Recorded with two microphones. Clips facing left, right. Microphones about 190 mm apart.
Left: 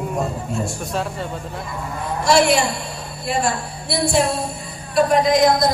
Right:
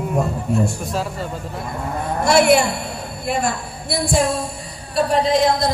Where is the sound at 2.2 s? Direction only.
55° right (ahead or behind).